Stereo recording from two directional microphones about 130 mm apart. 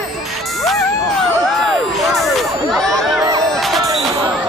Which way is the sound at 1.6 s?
Centre (ahead or behind).